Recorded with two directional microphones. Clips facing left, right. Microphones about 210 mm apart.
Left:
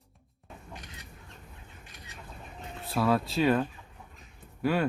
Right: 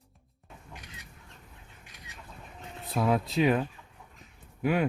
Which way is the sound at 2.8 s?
20° right (ahead or behind).